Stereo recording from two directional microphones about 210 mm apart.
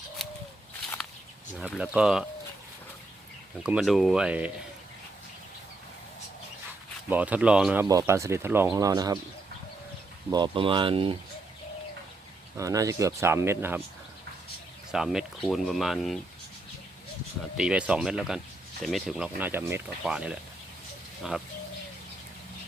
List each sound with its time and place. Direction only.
0.2 s a sound: centre (ahead or behind)
1.5 s speech: 5° right (ahead or behind)
3.6 s speech: 5° right (ahead or behind)
7.1 s speech: 5° right (ahead or behind)
10.2 s speech: 20° right (ahead or behind)
12.5 s speech: 15° right (ahead or behind)
14.9 s speech: centre (ahead or behind)
17.6 s speech: 5° right (ahead or behind)